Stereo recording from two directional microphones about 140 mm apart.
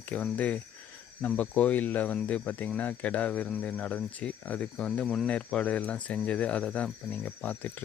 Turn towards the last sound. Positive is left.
turn(degrees=10)  # may be behind; listen again after turning